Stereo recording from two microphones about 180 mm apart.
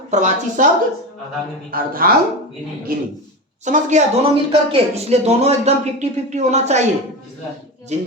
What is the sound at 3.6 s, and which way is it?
Speech, 45° right (ahead or behind).